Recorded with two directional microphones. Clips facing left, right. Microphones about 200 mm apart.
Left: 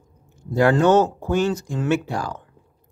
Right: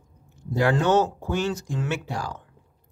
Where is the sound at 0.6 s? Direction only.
50° left (ahead or behind).